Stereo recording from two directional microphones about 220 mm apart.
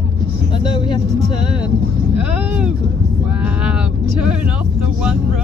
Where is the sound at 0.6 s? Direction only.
20° left (ahead or behind).